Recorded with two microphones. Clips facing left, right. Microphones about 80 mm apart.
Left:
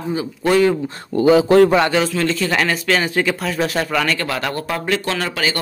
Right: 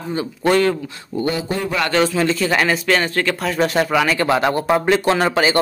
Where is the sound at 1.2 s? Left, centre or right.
Left.